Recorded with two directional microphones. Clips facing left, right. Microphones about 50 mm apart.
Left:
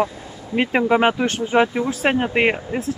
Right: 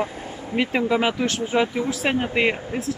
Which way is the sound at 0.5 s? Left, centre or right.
Left.